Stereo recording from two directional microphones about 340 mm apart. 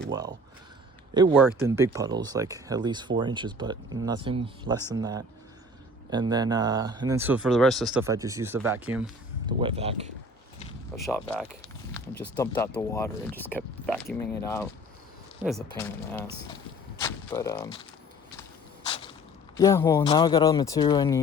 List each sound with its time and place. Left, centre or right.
0.1 s speech: centre
10.9 s speech: centre
18.9 s a sound: centre
19.5 s speech: centre